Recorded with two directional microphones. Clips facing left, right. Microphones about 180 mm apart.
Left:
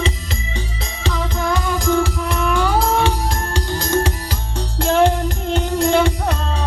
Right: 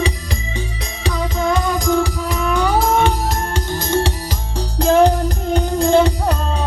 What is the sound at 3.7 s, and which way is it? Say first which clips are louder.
Music: even; 20° right (ahead or behind).